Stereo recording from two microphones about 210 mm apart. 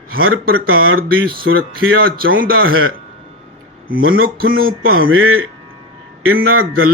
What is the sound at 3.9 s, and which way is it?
A man's voice, 75° right (ahead or behind).